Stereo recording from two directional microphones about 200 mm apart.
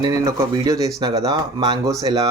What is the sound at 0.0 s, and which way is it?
Speech, 15° right (ahead or behind).